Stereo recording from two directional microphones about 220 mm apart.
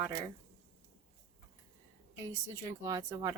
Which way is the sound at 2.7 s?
15° right (ahead or behind).